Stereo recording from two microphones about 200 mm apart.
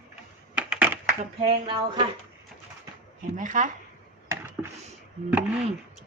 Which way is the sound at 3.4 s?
40° right (ahead or behind).